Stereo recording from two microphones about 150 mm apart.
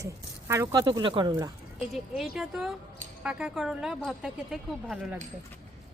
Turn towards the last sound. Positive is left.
turn(degrees=-5)  # may be behind; listen again after turning